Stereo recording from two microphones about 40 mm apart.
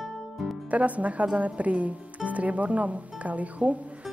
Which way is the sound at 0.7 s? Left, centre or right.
Right.